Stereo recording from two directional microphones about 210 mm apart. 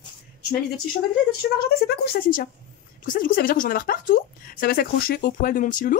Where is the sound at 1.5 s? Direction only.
50° left (ahead or behind).